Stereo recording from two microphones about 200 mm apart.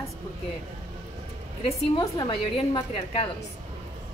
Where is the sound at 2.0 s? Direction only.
20° left (ahead or behind).